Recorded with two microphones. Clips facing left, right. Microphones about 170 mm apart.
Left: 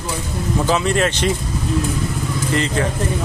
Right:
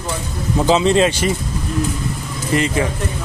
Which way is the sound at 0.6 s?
20° right (ahead or behind).